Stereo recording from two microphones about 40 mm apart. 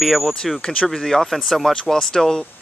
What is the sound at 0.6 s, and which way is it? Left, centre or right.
Speech, left.